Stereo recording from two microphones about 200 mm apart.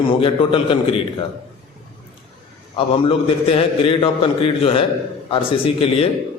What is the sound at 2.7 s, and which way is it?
A man's voice, 25° left (ahead or behind).